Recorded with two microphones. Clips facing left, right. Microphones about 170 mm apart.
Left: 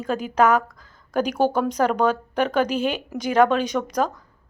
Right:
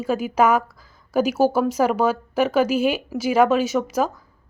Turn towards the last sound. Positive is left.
turn(degrees=-5)  # may be behind; listen again after turning